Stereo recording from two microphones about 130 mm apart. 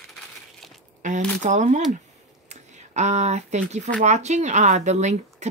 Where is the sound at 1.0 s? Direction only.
70° right (ahead or behind).